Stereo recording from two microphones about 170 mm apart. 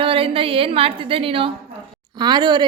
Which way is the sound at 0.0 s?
30° right (ahead or behind).